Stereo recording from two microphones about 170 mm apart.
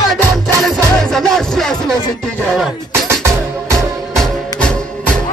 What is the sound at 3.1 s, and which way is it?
Music, 15° right (ahead or behind).